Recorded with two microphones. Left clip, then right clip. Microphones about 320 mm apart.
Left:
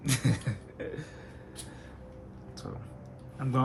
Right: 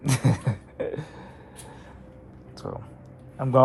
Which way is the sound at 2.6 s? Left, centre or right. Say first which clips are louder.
Right 10 dB; centre.